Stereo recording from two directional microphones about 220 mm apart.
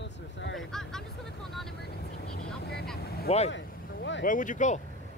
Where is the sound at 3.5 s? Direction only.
55° left (ahead or behind).